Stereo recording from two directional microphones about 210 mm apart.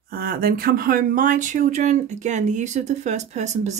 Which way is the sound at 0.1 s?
45° right (ahead or behind).